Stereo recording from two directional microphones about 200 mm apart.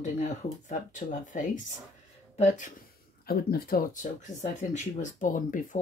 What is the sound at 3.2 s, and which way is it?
Speech, 50° left (ahead or behind).